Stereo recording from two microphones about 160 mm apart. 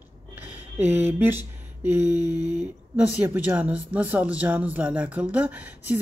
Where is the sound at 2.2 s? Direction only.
25° left (ahead or behind).